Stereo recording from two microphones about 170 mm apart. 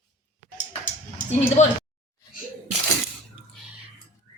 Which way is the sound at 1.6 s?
45° left (ahead or behind).